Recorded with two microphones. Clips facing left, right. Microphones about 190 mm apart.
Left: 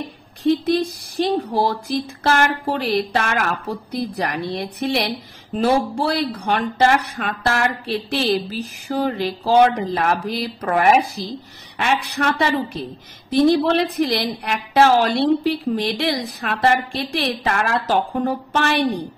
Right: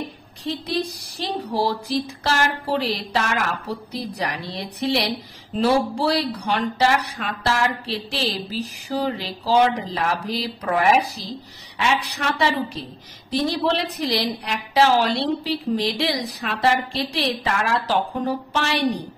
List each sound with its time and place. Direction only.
0.4 s speech: 55° left (ahead or behind)